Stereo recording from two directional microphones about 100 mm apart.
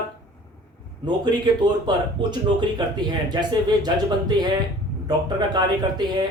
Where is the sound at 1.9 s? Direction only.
50° right (ahead or behind).